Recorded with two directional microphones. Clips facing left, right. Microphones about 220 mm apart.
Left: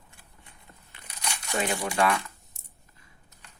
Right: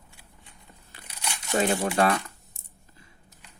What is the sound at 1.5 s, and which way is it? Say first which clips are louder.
Speech: right 4 dB; 40° right (ahead or behind).